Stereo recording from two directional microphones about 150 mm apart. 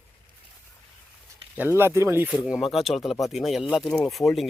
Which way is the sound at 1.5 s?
15° right (ahead or behind).